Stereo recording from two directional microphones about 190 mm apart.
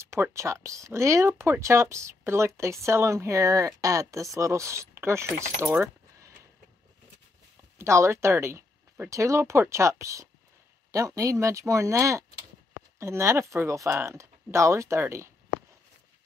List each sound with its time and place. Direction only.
0.0 s speech: 15° right (ahead or behind)
7.8 s speech: 15° right (ahead or behind)